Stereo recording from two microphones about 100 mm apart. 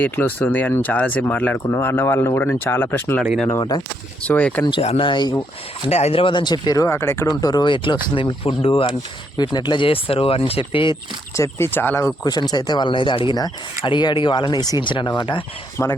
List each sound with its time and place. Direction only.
0.0 s speech: 15° left (ahead or behind)
4.2 s speech: 15° left (ahead or behind)
4.8 s speech: 90° left
5.0 s speech: 45° left (ahead or behind)
5.9 s speech: 90° left; by 6.8 s 45° left (ahead or behind)
6.8 s speech: 25° left (ahead or behind)
7.4 s speech: 45° left (ahead or behind); by 8.9 s 60° left (ahead or behind)
9.4 s speech: 45° left (ahead or behind)
11.3 s speech: 30° left (ahead or behind)
12.2 s speech: 40° left (ahead or behind)
14.8 s speech: 55° left (ahead or behind)
15.8 s speech: 30° left (ahead or behind)